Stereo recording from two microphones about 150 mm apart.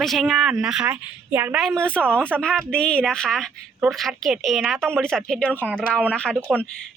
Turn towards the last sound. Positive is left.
turn(degrees=5)  # may be behind; listen again after turning